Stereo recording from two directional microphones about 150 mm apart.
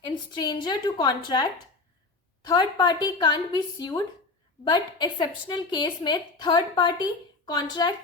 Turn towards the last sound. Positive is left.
turn(degrees=30)  # may be behind; listen again after turning